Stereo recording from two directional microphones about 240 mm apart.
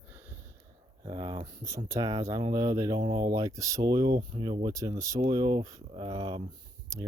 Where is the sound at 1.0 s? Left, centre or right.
Centre.